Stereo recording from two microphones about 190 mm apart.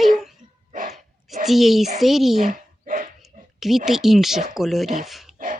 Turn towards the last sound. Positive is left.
turn(degrees=-45)  # may be behind; listen again after turning